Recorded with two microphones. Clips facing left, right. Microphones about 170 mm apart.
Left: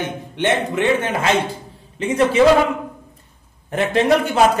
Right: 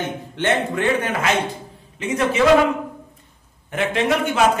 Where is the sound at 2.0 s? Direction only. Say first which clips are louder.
Left 4 dB; 30° left (ahead or behind).